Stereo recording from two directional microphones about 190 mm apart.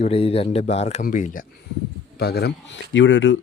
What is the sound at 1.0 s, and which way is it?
Speech, 45° left (ahead or behind).